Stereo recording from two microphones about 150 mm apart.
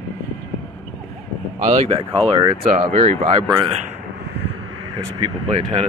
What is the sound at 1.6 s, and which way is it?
Speech, 40° right (ahead or behind).